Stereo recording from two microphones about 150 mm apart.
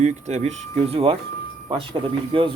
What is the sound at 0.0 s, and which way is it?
Speech, 50° right (ahead or behind).